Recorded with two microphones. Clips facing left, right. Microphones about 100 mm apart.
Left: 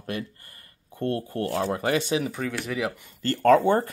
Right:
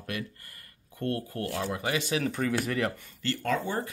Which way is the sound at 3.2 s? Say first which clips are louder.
Left 11 dB; 45° left (ahead or behind).